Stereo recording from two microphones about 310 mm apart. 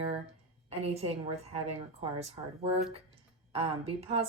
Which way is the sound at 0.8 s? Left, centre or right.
Centre.